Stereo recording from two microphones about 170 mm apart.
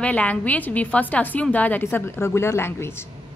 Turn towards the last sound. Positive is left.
turn(degrees=15)  # may be behind; listen again after turning